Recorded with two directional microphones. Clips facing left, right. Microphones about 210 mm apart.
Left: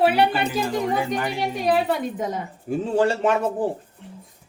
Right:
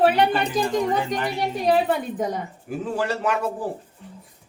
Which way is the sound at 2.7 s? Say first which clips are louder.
Left 5 dB; 25° left (ahead or behind).